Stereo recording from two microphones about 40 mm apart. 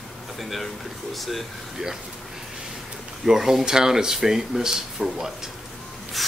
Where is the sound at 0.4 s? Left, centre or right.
Centre.